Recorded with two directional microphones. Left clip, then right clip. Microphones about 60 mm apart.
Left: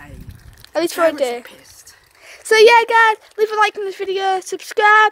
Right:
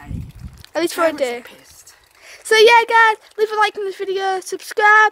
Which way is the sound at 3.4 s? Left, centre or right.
Centre.